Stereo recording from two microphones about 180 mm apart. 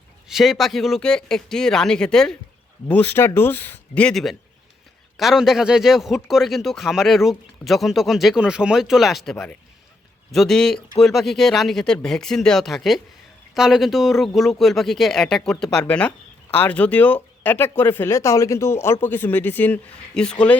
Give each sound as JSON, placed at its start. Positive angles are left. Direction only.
{"t": 0.3, "sound": "speech", "side_deg": 0}